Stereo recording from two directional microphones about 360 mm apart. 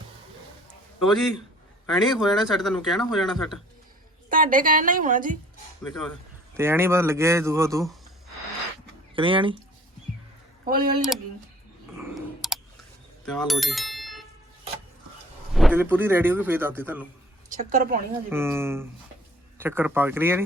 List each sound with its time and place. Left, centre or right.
1.0 s speech: centre
4.3 s a woman's voice: right
5.8 s speech: centre
9.1 s speech: centre
10.7 s a woman's voice: right
11.9 s computer keyboard: centre
13.2 s bicycle bell: centre
15.5 s speech: centre
17.6 s a woman's voice: right
18.3 s speech: centre